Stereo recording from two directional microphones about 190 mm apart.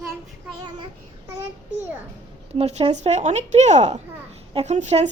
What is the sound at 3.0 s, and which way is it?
A child's voice, 35° right (ahead or behind).